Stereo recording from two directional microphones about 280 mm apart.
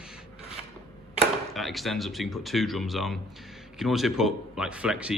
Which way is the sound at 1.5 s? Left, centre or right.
Centre.